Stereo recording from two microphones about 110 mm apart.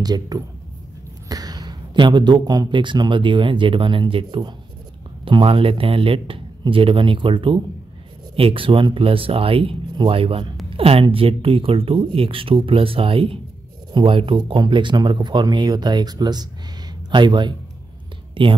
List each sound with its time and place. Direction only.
0.0 s a man's voice: 35° right (ahead or behind)